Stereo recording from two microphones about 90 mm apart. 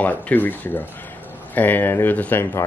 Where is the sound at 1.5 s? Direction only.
20° left (ahead or behind).